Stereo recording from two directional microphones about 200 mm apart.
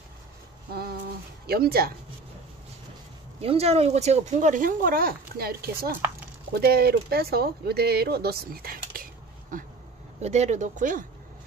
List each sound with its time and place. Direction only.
1.5 s speech: 50° right (ahead or behind)
3.3 s speech: 30° right (ahead or behind); by 9.0 s 50° right (ahead or behind)
10.2 s speech: 35° right (ahead or behind)